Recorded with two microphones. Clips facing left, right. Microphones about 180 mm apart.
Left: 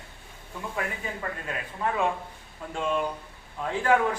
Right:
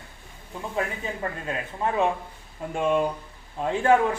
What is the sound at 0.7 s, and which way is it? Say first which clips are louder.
Speech: right 4 dB; 25° right (ahead or behind).